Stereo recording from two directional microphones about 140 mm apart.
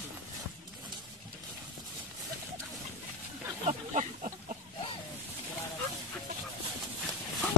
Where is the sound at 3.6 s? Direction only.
55° right (ahead or behind).